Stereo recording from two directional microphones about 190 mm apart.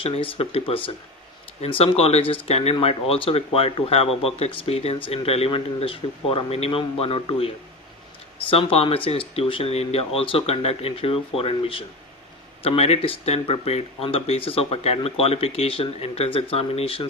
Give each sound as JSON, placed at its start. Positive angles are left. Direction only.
{"t": 0.0, "sound": "speech", "side_deg": 30}